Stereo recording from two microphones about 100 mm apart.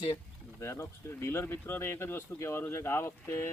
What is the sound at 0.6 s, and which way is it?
Speech, 25° left (ahead or behind).